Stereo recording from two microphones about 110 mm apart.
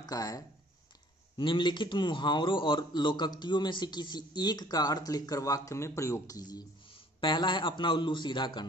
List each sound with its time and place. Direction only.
0.0 s speech: 35° left (ahead or behind)
1.3 s a man's voice: 45° left (ahead or behind)
7.2 s a man's voice: 45° left (ahead or behind)